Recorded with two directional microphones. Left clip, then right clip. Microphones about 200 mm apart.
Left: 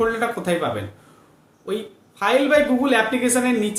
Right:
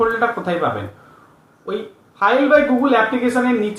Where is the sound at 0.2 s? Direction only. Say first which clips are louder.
Right 4 dB; 25° left (ahead or behind).